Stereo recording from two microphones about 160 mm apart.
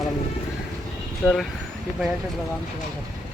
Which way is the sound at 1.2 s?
5° left (ahead or behind).